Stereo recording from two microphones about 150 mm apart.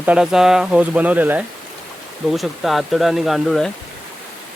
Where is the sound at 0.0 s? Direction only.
5° right (ahead or behind).